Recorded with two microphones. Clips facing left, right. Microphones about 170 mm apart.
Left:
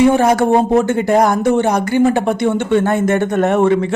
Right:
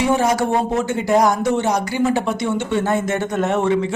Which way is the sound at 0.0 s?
55° left (ahead or behind).